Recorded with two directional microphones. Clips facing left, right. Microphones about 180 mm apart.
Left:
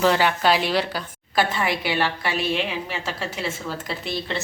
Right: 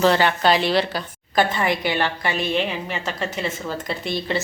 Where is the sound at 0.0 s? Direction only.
10° left (ahead or behind).